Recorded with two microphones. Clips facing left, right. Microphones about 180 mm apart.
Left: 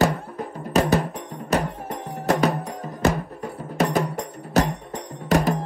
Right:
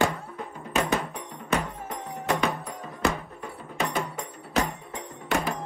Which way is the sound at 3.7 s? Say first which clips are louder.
Left 7 dB; 40° left (ahead or behind).